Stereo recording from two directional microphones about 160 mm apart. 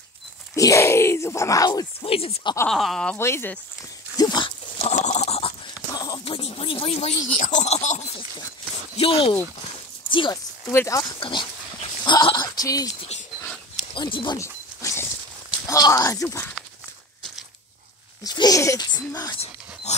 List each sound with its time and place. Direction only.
0.6 s a sound: 20° left (ahead or behind)
2.0 s speech: 35° left (ahead or behind)
2.7 s speech: centre (ahead or behind)
3.2 s speech: 15° left (ahead or behind)
4.2 s pig: 25° left (ahead or behind)
4.8 s goat: 45° left (ahead or behind)
5.9 s clip-clop: 25° left (ahead or behind)
6.5 s a sound: 35° left (ahead or behind)
7.3 s speech: 50° left (ahead or behind); by 10.4 s 30° left (ahead or behind)
10.7 s speech: 20° left (ahead or behind)
11.1 s speech: 30° left (ahead or behind)
13.9 s zipper: 30° left (ahead or behind)
15.6 s speech: 20° left (ahead or behind)
18.2 s speech: 25° left (ahead or behind)